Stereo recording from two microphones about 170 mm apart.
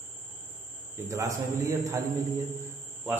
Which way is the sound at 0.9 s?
20° right (ahead or behind).